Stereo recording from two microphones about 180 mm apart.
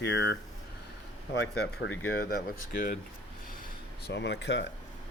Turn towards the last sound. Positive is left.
turn(degrees=75)  # may be behind; listen again after turning